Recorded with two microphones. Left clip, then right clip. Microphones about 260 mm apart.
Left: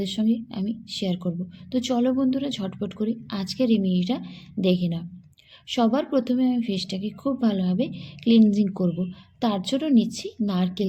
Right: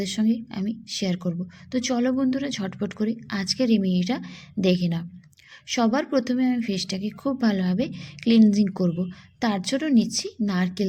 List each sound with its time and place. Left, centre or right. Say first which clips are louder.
0.0 s a woman's voice: even; right